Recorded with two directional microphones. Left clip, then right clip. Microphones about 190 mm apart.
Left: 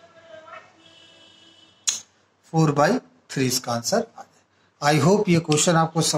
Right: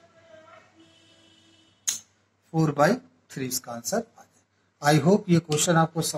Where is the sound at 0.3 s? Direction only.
40° left (ahead or behind).